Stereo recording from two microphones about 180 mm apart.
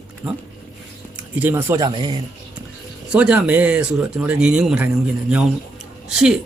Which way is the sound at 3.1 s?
5° right (ahead or behind).